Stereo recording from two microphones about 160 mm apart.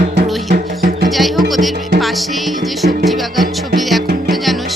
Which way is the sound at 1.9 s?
Centre (ahead or behind).